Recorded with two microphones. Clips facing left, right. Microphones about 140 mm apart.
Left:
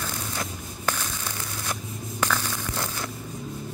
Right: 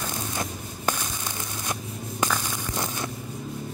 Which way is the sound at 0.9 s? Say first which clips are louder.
Right 1 dB; 15° right (ahead or behind).